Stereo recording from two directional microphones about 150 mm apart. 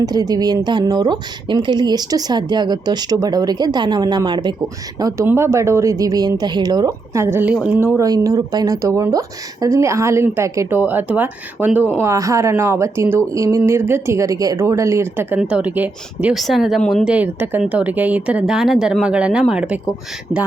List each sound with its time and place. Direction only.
0.0 s a woman's voice: 25° right (ahead or behind); by 19.8 s 5° right (ahead or behind)